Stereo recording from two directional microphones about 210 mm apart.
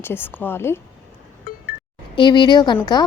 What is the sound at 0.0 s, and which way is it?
Speech, 10° left (ahead or behind).